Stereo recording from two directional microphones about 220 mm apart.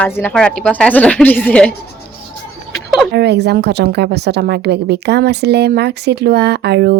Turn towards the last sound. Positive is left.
turn(degrees=-50)  # may be behind; listen again after turning